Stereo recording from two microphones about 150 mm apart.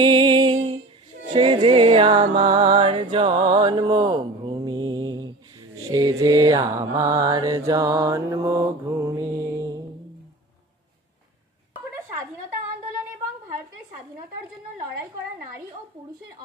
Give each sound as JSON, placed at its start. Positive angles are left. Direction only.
{"t": 0.0, "sound": "music", "side_deg": -30}
{"t": 2.5, "sound": "a sound", "side_deg": -35}
{"t": 5.9, "sound": "mantra", "side_deg": -25}